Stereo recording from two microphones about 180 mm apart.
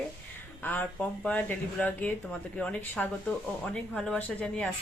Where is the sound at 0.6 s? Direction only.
10° left (ahead or behind).